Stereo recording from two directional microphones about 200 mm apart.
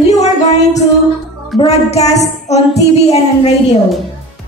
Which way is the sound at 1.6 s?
30° left (ahead or behind).